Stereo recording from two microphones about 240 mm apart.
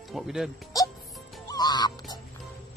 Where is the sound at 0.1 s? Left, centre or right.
Centre.